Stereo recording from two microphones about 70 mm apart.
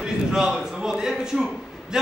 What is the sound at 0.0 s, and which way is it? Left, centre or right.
A man's voice, centre.